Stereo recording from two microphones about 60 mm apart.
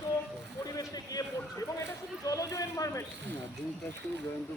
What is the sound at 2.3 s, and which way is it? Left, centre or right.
Speech, left.